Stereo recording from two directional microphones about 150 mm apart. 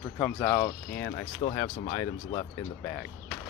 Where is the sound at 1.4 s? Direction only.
35° left (ahead or behind).